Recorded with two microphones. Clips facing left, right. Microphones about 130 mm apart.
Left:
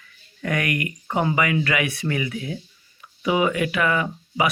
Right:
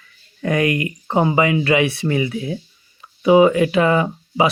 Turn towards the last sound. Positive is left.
turn(degrees=-30)  # may be behind; listen again after turning